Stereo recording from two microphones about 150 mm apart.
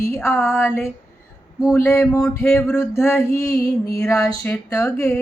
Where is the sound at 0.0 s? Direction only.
15° left (ahead or behind).